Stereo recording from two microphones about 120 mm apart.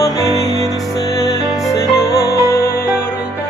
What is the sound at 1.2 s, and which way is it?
Music, 30° left (ahead or behind).